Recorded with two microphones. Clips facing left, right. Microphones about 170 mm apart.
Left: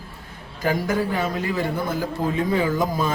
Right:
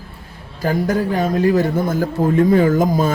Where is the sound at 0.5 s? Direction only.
40° right (ahead or behind).